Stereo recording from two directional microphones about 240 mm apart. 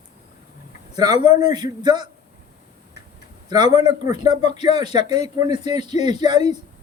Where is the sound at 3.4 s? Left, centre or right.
Centre.